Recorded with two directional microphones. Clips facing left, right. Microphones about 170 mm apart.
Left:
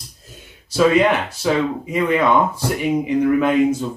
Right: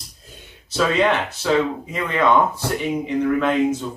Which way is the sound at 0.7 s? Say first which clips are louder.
Left 4 dB; 10° left (ahead or behind).